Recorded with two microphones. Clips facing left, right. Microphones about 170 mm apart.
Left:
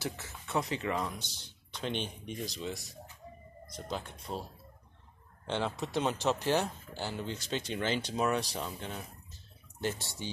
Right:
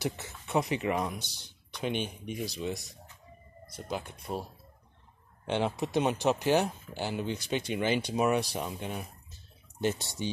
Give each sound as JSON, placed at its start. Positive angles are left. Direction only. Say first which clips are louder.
{"t": 0.0, "sound": "speech", "louder": "right 4 dB", "side_deg": -15}
{"t": 5.5, "sound": "speech", "louder": "right 4 dB", "side_deg": -15}